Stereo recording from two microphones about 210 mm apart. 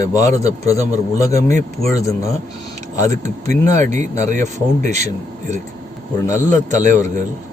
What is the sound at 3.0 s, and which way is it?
Speech, 35° right (ahead or behind).